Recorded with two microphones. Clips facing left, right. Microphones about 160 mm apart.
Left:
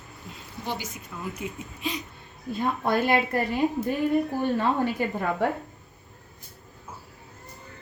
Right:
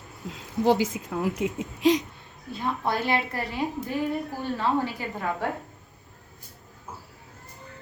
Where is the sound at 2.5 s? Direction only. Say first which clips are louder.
Left 3 dB; 50° left (ahead or behind).